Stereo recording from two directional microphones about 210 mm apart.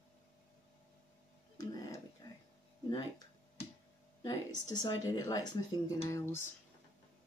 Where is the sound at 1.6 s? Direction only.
15° left (ahead or behind).